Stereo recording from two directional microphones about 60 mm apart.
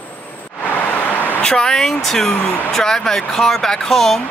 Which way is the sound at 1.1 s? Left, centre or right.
Left.